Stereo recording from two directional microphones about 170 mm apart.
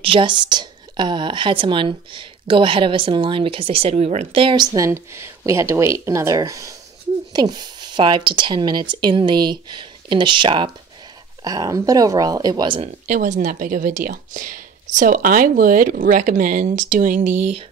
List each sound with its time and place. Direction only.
0.0 s a woman's voice: 30° right (ahead or behind)
13.0 s speech: 45° right (ahead or behind)